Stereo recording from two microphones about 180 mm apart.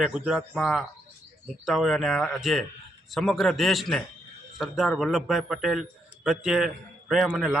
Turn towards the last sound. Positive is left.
turn(degrees=-5)  # may be behind; listen again after turning